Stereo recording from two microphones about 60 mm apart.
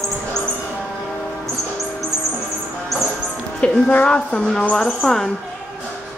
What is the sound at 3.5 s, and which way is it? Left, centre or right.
Music, centre.